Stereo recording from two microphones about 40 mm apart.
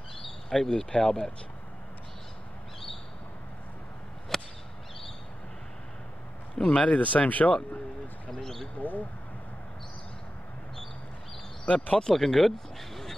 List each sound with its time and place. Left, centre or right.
0.5 s speech: centre
4.3 s a sound: centre
6.6 s speech: left
8.3 s speech: centre
8.7 s speech: left
11.6 s speech: left
12.0 s speech: centre